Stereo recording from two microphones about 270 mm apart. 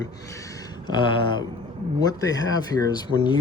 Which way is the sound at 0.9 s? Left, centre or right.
Centre.